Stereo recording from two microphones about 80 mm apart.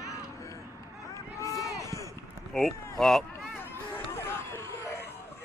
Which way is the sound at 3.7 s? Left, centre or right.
Left.